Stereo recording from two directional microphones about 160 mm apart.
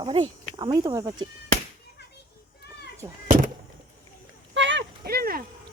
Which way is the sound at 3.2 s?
55° right (ahead or behind).